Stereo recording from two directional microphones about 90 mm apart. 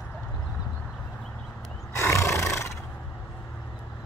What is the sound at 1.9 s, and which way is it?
Roar, 30° left (ahead or behind).